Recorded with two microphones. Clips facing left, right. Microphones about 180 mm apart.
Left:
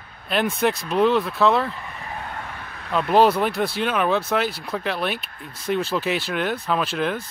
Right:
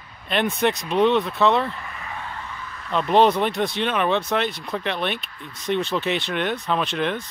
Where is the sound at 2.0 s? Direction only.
40° left (ahead or behind); by 2.9 s 60° left (ahead or behind).